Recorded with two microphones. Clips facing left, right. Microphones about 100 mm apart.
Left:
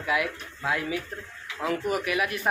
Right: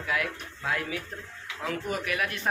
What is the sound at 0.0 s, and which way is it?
A man's voice, 5° left (ahead or behind).